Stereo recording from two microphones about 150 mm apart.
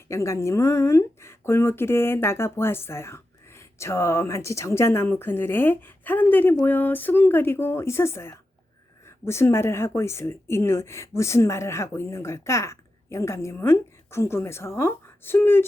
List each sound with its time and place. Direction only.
0.1 s speech: 20° left (ahead or behind)